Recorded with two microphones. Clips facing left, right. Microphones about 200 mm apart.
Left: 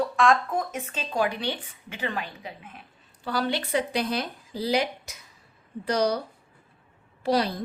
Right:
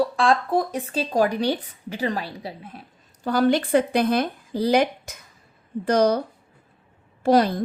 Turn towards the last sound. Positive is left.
turn(degrees=-50)  # may be behind; listen again after turning